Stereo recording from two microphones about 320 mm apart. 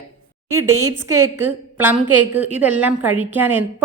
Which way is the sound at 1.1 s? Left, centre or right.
Right.